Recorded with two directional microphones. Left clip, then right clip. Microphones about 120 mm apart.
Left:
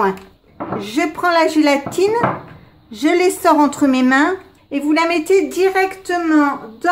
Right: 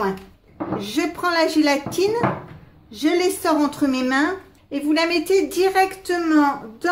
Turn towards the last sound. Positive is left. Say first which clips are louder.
# left 3 dB
turn(degrees=0)  # may be behind; listen again after turning